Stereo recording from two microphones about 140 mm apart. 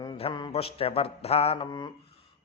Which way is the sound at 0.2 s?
35° left (ahead or behind).